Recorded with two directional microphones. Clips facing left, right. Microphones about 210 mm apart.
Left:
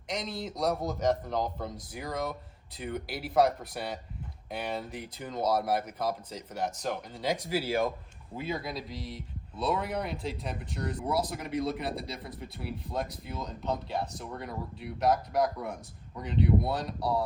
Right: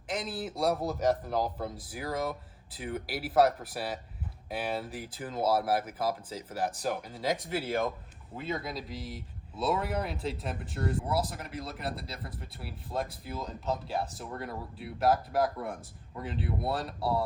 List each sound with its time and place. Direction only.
0.1 s speech: 5° right (ahead or behind)